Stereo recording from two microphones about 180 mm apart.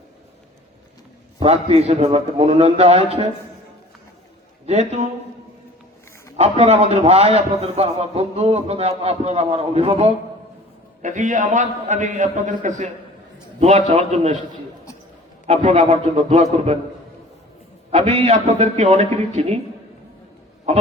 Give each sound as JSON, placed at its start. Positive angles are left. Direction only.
{"t": 1.4, "sound": "a man's voice", "side_deg": -35}
{"t": 4.6, "sound": "a man's voice", "side_deg": -35}
{"t": 6.3, "sound": "a man's voice", "side_deg": -35}
{"t": 11.0, "sound": "a man's voice", "side_deg": -45}
{"t": 15.4, "sound": "a man's voice", "side_deg": -40}
{"t": 17.9, "sound": "a man's voice", "side_deg": -35}